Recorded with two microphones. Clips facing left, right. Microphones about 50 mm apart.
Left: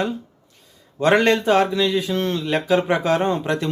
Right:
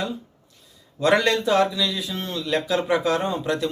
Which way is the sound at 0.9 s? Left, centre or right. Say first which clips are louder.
Left 3 dB; left.